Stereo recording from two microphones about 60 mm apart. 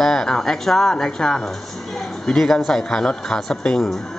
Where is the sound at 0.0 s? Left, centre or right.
Centre.